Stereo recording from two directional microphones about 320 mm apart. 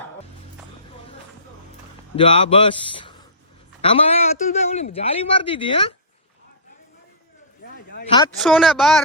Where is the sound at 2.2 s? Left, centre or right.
Centre.